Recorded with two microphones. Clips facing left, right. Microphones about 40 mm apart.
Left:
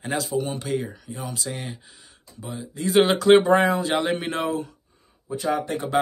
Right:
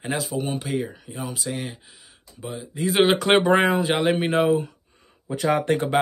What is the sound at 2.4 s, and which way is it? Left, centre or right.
Speech, right.